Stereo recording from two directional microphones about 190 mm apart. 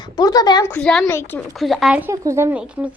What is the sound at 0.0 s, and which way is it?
Speech, 20° left (ahead or behind).